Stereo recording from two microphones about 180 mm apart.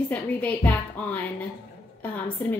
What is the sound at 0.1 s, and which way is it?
A woman's voice, 10° left (ahead or behind).